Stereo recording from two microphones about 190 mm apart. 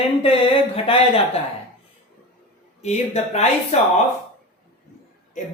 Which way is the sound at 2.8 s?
35° left (ahead or behind).